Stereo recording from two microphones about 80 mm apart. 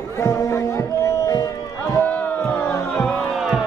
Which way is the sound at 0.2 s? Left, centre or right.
Left.